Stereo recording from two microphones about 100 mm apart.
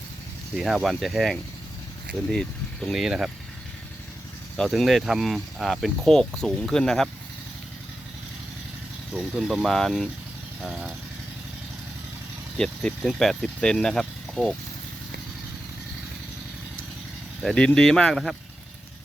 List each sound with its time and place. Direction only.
0.5 s speech: 5° right (ahead or behind)
4.7 s speech: centre (ahead or behind)
9.1 s speech: 5° right (ahead or behind)
12.5 s speech: 5° left (ahead or behind)
17.4 s speech: 10° left (ahead or behind)